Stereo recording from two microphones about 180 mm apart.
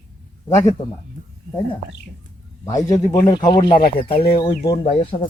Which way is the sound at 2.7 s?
20° left (ahead or behind).